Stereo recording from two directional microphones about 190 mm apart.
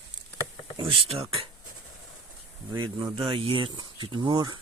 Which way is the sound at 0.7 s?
25° right (ahead or behind).